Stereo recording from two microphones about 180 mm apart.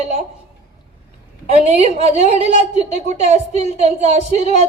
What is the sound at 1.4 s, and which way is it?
A woman's voice, 35° right (ahead or behind).